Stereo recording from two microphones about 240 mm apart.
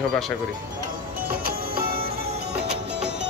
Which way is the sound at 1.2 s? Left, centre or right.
Right.